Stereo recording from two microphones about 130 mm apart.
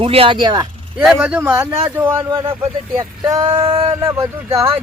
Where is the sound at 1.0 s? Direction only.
5° right (ahead or behind).